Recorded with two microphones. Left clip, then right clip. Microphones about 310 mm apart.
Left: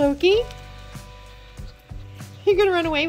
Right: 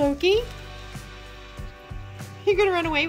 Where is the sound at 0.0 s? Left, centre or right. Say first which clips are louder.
Left 3 dB; centre.